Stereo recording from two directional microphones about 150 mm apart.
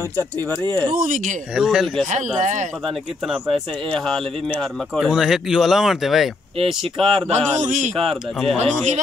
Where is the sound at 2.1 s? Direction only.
55° right (ahead or behind).